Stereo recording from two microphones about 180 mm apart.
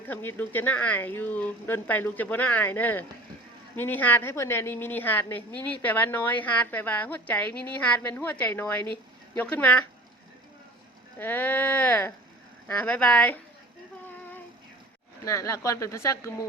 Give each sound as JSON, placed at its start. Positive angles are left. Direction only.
{"t": 0.0, "sound": "speech", "side_deg": 10}
{"t": 11.2, "sound": "speech", "side_deg": 10}
{"t": 15.2, "sound": "speech", "side_deg": 15}